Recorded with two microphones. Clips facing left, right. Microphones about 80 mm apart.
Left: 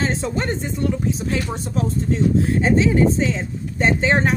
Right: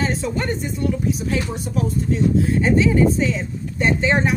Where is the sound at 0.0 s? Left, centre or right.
Left.